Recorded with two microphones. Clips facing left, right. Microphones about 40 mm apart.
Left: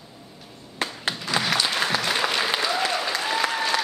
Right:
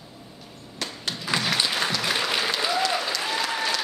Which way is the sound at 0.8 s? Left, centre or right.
Left.